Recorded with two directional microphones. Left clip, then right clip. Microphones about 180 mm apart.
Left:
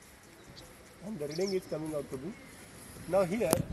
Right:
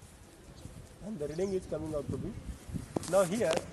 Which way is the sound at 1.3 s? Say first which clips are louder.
Left 1 dB; 15° right (ahead or behind).